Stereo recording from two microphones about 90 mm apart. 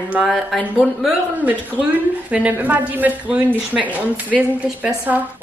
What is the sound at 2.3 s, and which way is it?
A woman's voice, 15° right (ahead or behind).